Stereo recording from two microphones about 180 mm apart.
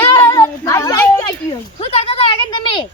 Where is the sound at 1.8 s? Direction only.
35° left (ahead or behind).